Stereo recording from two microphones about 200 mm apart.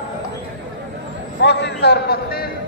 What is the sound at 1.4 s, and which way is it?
Speech, 60° left (ahead or behind).